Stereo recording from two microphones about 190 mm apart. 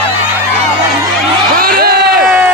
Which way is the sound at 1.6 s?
55° right (ahead or behind).